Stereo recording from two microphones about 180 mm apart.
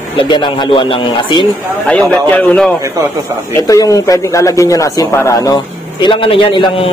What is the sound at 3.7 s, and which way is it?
A man's voice, 20° left (ahead or behind).